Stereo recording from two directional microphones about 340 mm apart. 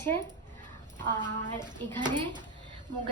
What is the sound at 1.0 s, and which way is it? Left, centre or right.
Speech, right.